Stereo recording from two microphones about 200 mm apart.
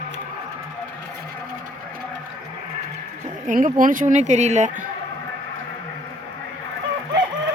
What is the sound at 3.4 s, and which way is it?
Speech, 40° right (ahead or behind).